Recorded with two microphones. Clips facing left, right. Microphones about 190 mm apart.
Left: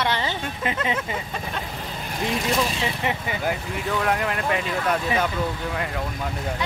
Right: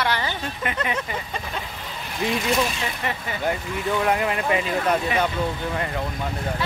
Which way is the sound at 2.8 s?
20° left (ahead or behind).